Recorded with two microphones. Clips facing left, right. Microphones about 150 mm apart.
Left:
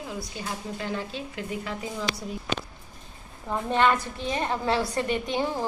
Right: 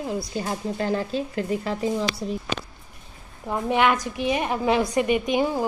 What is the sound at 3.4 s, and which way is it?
A woman's voice, 15° right (ahead or behind).